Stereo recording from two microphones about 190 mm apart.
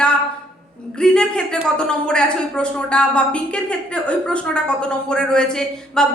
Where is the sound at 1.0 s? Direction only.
5° left (ahead or behind).